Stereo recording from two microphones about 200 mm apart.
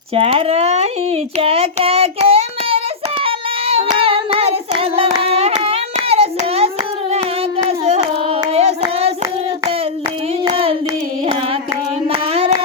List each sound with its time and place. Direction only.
0.1 s a child's voice: 30° right (ahead or behind)
3.2 s hands: 30° right (ahead or behind)
7.7 s hands: 30° right (ahead or behind)
10.4 s hands: 30° right (ahead or behind)
12.3 s carnatic music: 30° right (ahead or behind)